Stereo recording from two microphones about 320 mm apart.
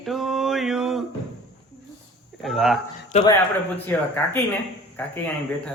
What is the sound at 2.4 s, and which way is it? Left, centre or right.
Speech, centre.